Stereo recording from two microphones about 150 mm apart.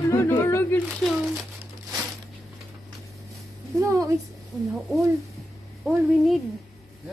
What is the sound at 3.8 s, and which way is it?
Speech, 20° right (ahead or behind).